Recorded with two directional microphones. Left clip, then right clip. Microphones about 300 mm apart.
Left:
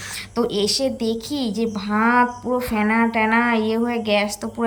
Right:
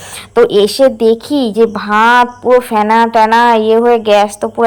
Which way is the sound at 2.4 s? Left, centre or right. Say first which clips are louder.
Right 15 dB; right.